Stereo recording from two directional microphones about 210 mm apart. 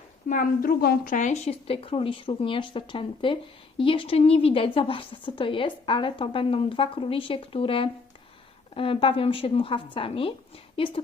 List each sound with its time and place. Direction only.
0.3 s a woman's voice: 40° left (ahead or behind); by 11.0 s 25° left (ahead or behind)